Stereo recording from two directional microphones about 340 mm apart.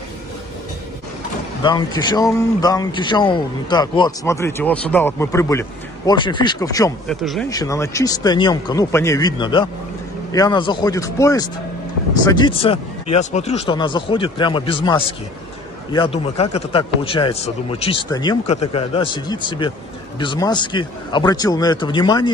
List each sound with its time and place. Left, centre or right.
1.6 s a man's voice: centre